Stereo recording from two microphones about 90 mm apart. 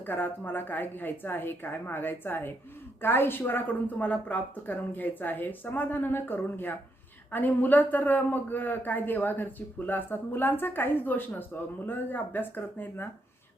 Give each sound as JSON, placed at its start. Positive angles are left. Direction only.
{"t": 0.0, "sound": "a woman's voice", "side_deg": 20}